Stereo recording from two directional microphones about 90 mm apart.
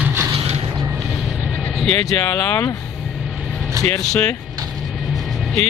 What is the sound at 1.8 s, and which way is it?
Speech, 10° left (ahead or behind).